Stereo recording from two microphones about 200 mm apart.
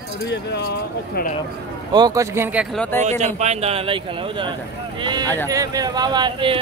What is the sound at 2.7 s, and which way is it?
Speech, 5° left (ahead or behind).